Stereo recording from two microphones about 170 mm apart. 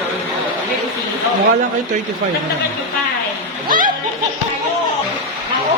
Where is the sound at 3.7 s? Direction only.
55° right (ahead or behind).